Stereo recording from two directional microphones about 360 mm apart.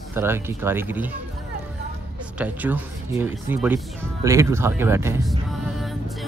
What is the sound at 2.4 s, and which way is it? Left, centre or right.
Speech, centre.